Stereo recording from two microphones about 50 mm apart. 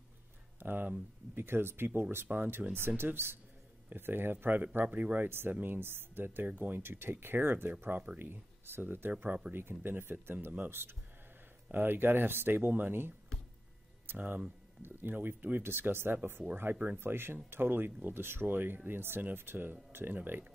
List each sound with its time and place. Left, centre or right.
0.6 s a sound: right
1.3 s speech: right
2.6 s speech: centre
3.0 s speech: right
6.9 s speech: right
14.1 s speech: right